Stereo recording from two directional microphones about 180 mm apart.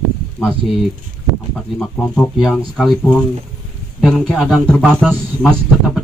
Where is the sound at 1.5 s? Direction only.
5° left (ahead or behind).